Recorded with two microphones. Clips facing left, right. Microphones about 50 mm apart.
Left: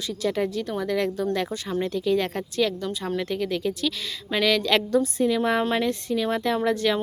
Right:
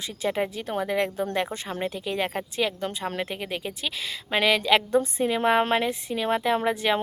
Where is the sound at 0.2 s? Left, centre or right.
Right.